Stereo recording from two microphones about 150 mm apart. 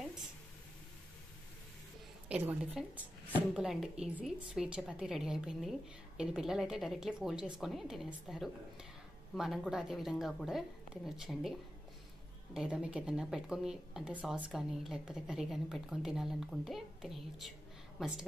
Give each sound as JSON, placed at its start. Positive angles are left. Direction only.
{"t": 2.2, "sound": "a woman's voice", "side_deg": -10}
{"t": 12.5, "sound": "a woman's voice", "side_deg": -5}